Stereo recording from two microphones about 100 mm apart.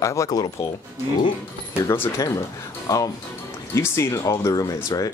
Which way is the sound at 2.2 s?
35° left (ahead or behind).